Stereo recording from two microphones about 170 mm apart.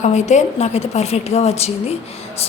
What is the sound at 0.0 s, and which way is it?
A woman's voice, 45° left (ahead or behind).